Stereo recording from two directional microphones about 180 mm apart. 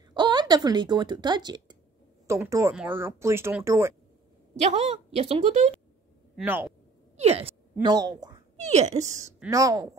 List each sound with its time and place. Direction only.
0.1 s a woman's voice: 25° right (ahead or behind)
4.6 s a woman's voice: 35° right (ahead or behind)
6.3 s speech: 10° right (ahead or behind)
7.2 s speech: 35° right (ahead or behind)
7.8 s speech: 20° right (ahead or behind)
8.5 s a woman's voice: 40° right (ahead or behind)
9.5 s speech: 20° right (ahead or behind)